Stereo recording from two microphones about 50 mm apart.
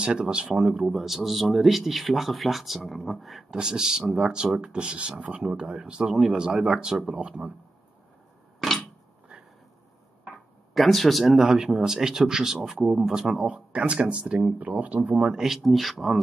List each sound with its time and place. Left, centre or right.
0.0 s speech: centre
0.8 s speech: centre
3.4 s speech: centre
9.3 s a sound: centre
10.7 s speech: centre
13.4 s speech: right
14.6 s speech: right
15.2 s speech: centre